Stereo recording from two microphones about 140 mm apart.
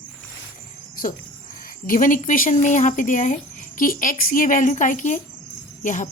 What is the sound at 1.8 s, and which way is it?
Speech, 75° left (ahead or behind).